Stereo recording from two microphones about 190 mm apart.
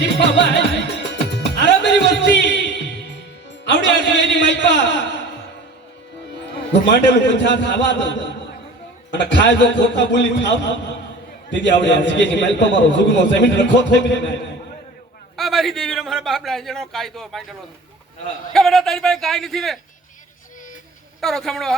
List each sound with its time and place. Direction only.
0.0 s music: 65° left (ahead or behind)
3.6 s a man's voice: 65° left (ahead or behind)
6.8 s a man's voice: 65° left (ahead or behind)
9.3 s a man's voice: 65° left (ahead or behind)
15.4 s a man's voice: centre (ahead or behind)
18.5 s a man's voice: centre (ahead or behind)
21.2 s a man's voice: centre (ahead or behind)